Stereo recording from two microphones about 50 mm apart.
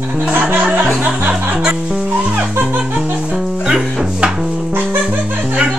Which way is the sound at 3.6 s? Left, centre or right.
Centre.